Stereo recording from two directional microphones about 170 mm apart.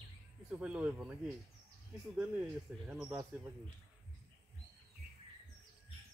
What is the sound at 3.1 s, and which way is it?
Speech, 20° right (ahead or behind).